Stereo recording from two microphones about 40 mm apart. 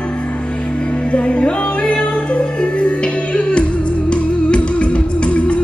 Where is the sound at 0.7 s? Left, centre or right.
Left.